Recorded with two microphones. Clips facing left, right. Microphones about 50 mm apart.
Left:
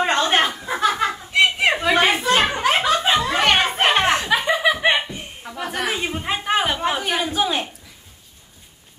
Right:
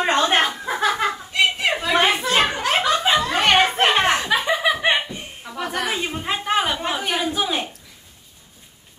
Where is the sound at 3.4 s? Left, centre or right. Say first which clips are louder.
Right 2 dB; centre.